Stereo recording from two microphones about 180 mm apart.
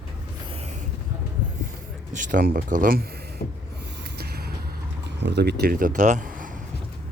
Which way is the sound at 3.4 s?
60° left (ahead or behind).